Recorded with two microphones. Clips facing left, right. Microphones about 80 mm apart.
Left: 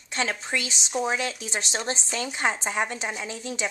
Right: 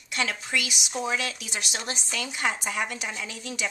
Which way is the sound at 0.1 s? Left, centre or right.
Left.